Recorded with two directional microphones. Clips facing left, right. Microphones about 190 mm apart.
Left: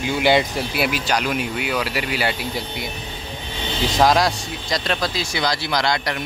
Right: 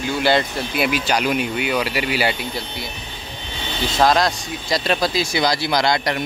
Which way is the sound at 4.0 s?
10° left (ahead or behind).